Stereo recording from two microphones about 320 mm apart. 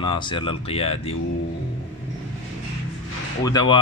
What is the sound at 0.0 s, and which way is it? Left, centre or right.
Speech, centre.